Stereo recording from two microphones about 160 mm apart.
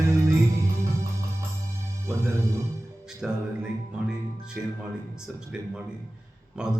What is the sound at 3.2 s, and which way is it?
Speech, 5° right (ahead or behind).